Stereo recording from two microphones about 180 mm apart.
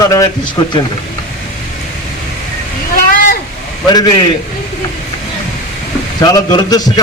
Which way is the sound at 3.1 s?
50° left (ahead or behind).